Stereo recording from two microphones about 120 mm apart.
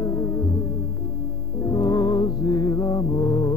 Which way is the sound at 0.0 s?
30° left (ahead or behind).